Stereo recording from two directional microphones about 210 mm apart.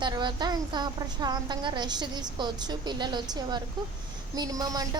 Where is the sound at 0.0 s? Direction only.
20° right (ahead or behind).